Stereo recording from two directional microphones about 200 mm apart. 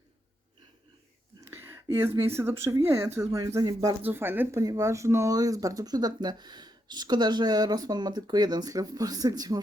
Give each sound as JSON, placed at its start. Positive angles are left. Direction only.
{"t": 1.5, "sound": "speech", "side_deg": -10}